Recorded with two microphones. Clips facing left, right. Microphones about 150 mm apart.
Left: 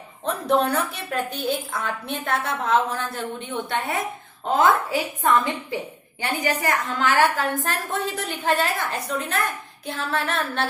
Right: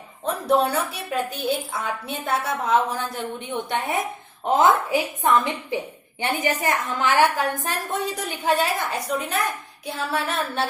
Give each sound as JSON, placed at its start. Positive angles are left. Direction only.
{"t": 0.3, "sound": "a woman's voice", "side_deg": -5}